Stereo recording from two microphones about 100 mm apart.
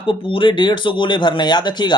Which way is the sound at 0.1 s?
60° left (ahead or behind).